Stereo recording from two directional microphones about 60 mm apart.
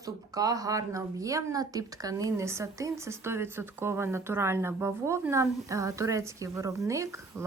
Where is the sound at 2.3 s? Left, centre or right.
Right.